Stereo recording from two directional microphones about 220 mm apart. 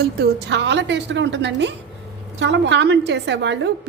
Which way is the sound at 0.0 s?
45° right (ahead or behind).